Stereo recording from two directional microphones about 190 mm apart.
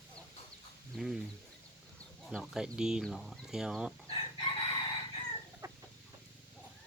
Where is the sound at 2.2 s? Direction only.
Centre (ahead or behind).